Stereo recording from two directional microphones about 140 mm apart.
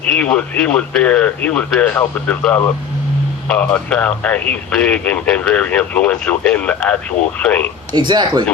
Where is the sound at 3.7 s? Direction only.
10° left (ahead or behind).